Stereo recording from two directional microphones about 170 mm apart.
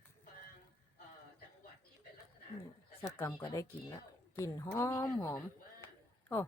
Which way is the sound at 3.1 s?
15° left (ahead or behind).